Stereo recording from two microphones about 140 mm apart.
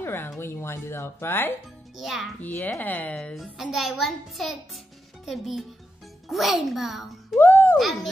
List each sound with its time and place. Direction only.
0.0 s a sound: 15° left (ahead or behind)
0.4 s speech: 15° left (ahead or behind)
2.0 s a child's voice: centre (ahead or behind)
2.4 s a child's voice: 15° left (ahead or behind); by 7.3 s centre (ahead or behind)
7.3 s a sound: 15° left (ahead or behind)
7.7 s a child's voice: centre (ahead or behind)